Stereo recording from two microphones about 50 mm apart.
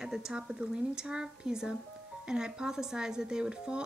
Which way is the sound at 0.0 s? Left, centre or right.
Centre.